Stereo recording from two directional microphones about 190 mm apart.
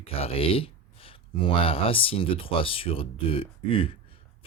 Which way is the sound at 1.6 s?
30° left (ahead or behind).